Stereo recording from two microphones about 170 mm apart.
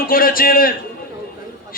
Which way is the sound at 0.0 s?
60° left (ahead or behind).